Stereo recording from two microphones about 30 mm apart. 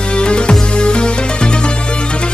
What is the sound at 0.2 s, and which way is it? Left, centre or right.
Music, left.